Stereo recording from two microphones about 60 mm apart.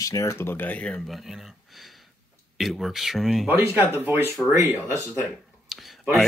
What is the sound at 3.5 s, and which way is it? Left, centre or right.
Speech, right.